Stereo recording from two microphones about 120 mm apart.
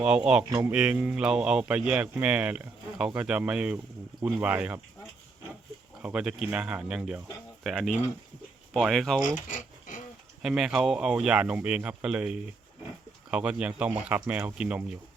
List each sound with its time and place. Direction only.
0.0 s speech: 5° right (ahead or behind)
6.0 s speech: 10° right (ahead or behind)
9.2 s a sound: 90° left
10.4 s speech: 5° right (ahead or behind)